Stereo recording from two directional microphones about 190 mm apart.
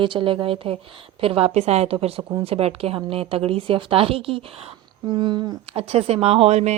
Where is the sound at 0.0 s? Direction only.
25° right (ahead or behind).